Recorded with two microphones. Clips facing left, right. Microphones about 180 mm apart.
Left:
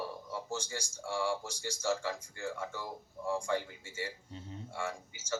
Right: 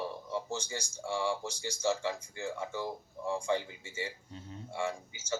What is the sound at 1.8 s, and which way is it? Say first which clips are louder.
Speech: right 2 dB; 20° right (ahead or behind).